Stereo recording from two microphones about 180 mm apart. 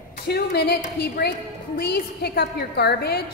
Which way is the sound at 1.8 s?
60° left (ahead or behind).